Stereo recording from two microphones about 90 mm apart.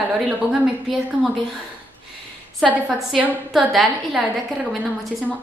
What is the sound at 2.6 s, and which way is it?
A woman's voice, 5° left (ahead or behind).